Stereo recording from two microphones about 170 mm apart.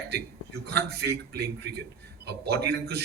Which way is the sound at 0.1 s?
70° right (ahead or behind).